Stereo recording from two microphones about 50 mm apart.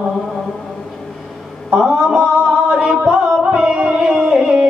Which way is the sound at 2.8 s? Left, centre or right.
Centre.